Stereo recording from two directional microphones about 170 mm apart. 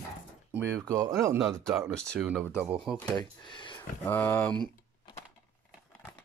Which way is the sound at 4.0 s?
15° left (ahead or behind).